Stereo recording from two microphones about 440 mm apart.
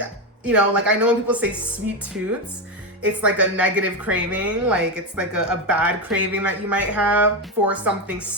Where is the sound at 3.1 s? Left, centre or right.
Centre.